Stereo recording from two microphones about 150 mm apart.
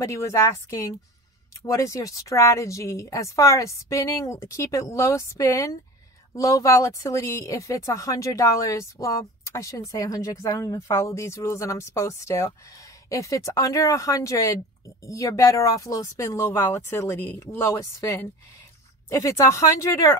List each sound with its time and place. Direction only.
0.0 s speech: 20° left (ahead or behind)